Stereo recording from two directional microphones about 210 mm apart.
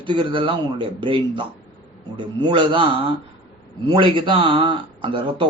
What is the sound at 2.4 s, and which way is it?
Speech, 20° right (ahead or behind).